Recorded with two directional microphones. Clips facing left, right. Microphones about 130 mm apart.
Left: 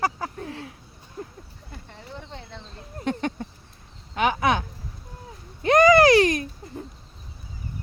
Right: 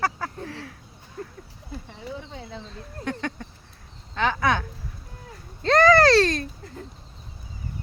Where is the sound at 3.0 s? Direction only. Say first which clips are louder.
Left 3 dB; 20° left (ahead or behind).